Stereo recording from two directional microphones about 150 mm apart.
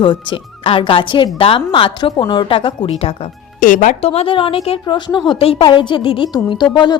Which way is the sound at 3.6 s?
60° left (ahead or behind).